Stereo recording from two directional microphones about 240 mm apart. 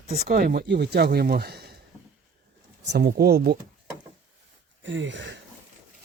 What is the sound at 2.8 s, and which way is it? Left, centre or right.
Speech, right.